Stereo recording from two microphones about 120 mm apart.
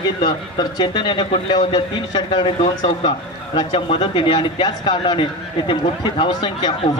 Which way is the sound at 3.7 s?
45° left (ahead or behind).